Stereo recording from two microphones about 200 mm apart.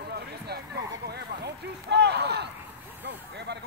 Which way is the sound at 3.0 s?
55° right (ahead or behind).